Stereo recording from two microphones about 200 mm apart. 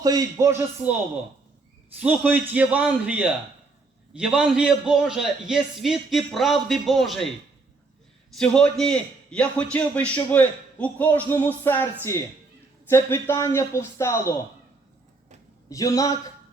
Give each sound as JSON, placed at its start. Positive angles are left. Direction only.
{"t": 0.0, "sound": "a man's voice", "side_deg": -15}
{"t": 8.4, "sound": "a man's voice", "side_deg": 5}
{"t": 15.7, "sound": "a man's voice", "side_deg": 15}